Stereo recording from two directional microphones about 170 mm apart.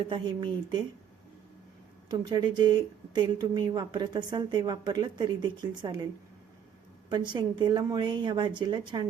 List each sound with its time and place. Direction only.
0.0 s speech: 30° right (ahead or behind)
2.0 s speech: 25° right (ahead or behind)
7.1 s speech: 25° right (ahead or behind)